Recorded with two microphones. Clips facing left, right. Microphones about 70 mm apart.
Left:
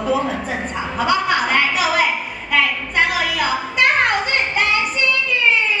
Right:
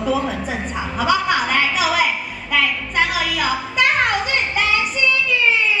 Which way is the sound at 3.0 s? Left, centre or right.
Left.